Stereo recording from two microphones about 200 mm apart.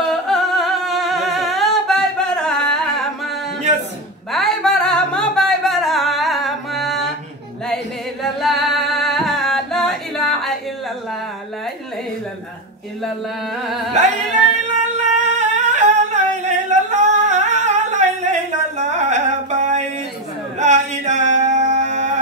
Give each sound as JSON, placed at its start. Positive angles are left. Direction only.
{"t": 0.0, "sound": "humming", "side_deg": 0}
{"t": 3.7, "sound": "a sound", "side_deg": -35}
{"t": 4.3, "sound": "music", "side_deg": 0}
{"t": 7.6, "sound": "singing", "side_deg": 0}
{"t": 14.0, "sound": "music", "side_deg": -35}
{"t": 14.7, "sound": "singing", "side_deg": -35}
{"t": 18.8, "sound": "music", "side_deg": -35}
{"t": 20.5, "sound": "a sound", "side_deg": -35}